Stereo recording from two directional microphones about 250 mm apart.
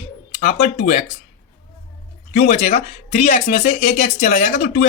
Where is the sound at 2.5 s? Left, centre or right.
Left.